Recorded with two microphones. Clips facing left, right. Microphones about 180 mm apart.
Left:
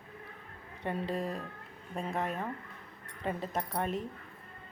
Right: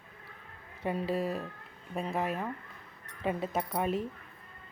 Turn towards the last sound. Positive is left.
turn(degrees=-5)  # may be behind; listen again after turning